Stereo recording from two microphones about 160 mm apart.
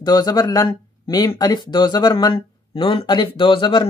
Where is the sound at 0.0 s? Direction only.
25° left (ahead or behind).